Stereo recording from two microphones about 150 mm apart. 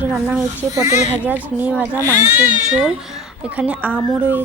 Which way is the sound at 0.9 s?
50° left (ahead or behind).